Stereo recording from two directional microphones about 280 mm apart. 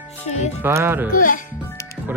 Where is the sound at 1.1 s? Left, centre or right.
Left.